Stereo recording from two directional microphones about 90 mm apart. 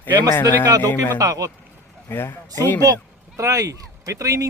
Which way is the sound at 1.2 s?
40° right (ahead or behind).